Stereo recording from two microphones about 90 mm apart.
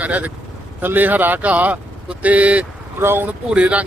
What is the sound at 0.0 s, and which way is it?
Speech, 15° right (ahead or behind).